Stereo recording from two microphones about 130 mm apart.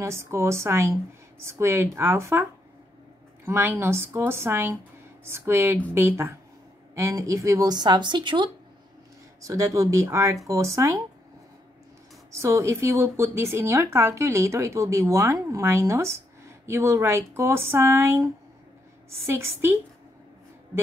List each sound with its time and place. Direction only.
0.0 s a woman's voice: 20° right (ahead or behind)
3.4 s a woman's voice: 20° right (ahead or behind); by 8.5 s 35° right (ahead or behind)
9.4 s a woman's voice: 25° right (ahead or behind)
12.3 s a woman's voice: 25° right (ahead or behind)